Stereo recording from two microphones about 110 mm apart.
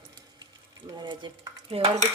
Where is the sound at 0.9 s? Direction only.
40° right (ahead or behind).